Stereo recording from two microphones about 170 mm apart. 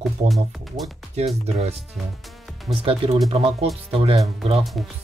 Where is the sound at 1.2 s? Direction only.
40° right (ahead or behind).